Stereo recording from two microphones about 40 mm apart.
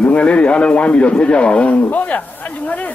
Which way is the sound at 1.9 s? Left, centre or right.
Left.